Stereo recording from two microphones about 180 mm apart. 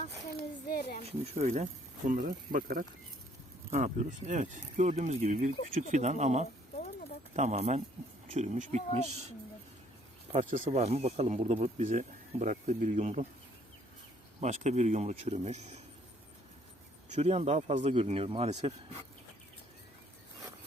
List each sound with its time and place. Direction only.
0.7 s a sound: 60° left (ahead or behind)
1.0 s speech: 35° right (ahead or behind)
2.0 s speech: 50° right (ahead or behind)
10.3 s speech: 40° right (ahead or behind)
14.4 s speech: 40° right (ahead or behind)
17.1 s speech: 35° right (ahead or behind)